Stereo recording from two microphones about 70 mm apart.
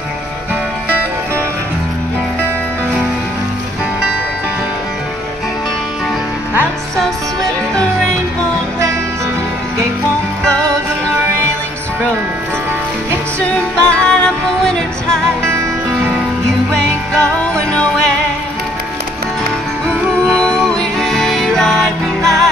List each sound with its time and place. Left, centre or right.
10.4 s music: centre
13.7 s music: centre
17.1 s music: centre
20.4 s music: centre